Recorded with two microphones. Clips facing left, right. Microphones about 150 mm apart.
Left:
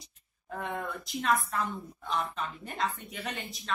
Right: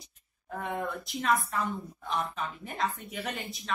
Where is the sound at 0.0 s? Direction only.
Centre (ahead or behind).